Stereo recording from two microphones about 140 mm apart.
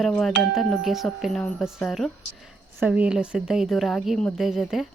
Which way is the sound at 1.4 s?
15° left (ahead or behind).